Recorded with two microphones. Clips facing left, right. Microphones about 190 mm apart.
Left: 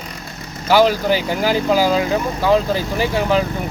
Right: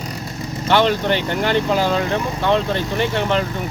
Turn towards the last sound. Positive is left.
turn(degrees=5)  # may be behind; listen again after turning